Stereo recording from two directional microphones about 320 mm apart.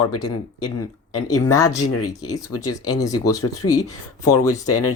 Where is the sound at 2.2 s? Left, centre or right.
Centre.